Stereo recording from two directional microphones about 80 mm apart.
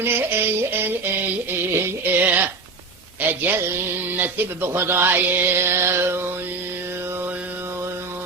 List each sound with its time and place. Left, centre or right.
0.0 s music: right
3.2 s a man's voice: right
4.2 s music: right
7.1 s mantra: right